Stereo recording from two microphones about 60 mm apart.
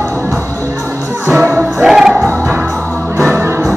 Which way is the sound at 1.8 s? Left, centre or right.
Centre.